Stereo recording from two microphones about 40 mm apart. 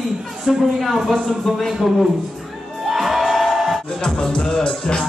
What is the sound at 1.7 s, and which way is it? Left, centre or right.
Speech, centre.